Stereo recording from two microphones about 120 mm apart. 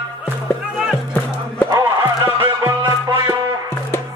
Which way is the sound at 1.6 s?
30° right (ahead or behind).